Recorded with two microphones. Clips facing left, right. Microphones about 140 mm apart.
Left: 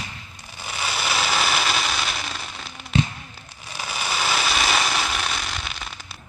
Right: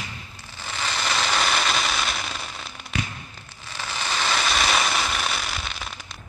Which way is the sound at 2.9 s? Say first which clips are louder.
Left 8 dB; 25° left (ahead or behind).